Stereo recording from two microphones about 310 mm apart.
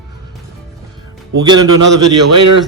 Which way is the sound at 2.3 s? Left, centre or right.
Right.